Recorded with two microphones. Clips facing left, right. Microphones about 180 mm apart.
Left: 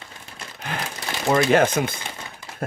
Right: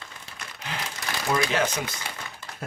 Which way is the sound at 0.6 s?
55° left (ahead or behind).